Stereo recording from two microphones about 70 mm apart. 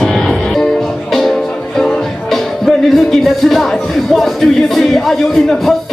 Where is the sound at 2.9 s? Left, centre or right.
Centre.